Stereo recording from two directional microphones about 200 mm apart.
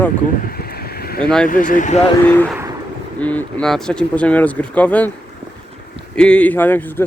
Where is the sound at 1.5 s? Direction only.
40° left (ahead or behind).